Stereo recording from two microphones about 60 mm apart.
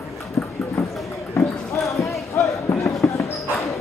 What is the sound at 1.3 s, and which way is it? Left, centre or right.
Clip-clop, left.